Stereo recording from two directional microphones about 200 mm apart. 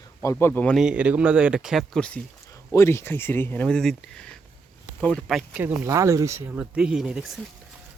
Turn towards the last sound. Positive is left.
turn(degrees=0)  # may be behind; listen again after turning